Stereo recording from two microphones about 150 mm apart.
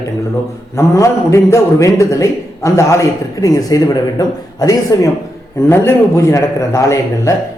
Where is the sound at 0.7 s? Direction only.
20° left (ahead or behind).